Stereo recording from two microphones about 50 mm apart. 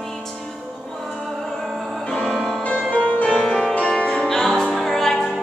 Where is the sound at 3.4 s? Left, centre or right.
Centre.